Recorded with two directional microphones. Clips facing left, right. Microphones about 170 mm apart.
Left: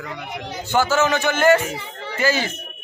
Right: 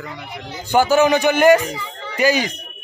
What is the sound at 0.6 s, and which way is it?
A man's voice, 15° right (ahead or behind).